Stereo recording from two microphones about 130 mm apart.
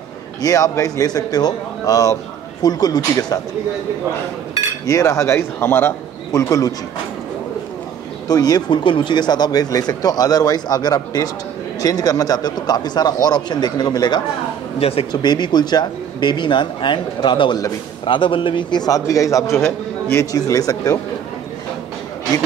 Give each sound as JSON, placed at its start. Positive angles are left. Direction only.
{"t": 0.4, "sound": "a man's voice", "side_deg": 25}
{"t": 4.8, "sound": "a man's voice", "side_deg": 25}
{"t": 8.3, "sound": "speech", "side_deg": 30}
{"t": 14.8, "sound": "speech", "side_deg": 50}
{"t": 15.2, "sound": "a man's voice", "side_deg": 35}